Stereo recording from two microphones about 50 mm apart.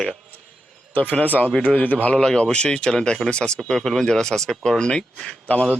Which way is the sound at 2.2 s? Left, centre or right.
Centre.